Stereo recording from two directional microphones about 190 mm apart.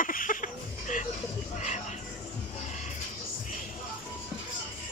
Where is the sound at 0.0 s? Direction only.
45° left (ahead or behind).